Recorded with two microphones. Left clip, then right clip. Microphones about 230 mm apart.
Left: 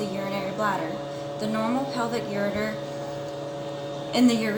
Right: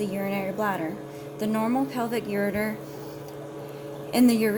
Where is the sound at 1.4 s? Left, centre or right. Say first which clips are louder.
Right 1 dB; right.